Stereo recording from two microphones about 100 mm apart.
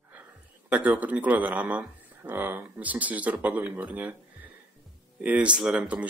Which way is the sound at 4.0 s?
15° right (ahead or behind).